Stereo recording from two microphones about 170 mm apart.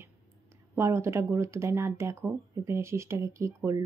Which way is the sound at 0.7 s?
15° right (ahead or behind).